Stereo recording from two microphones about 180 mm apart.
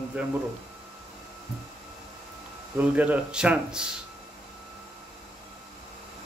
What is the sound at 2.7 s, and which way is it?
Speech, 10° right (ahead or behind).